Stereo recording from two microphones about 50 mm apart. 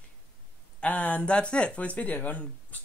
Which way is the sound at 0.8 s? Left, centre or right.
Left.